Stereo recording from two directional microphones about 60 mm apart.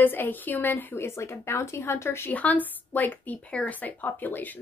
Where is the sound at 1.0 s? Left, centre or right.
Left.